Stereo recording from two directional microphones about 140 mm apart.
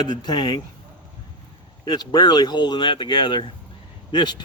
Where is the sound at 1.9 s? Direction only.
30° left (ahead or behind).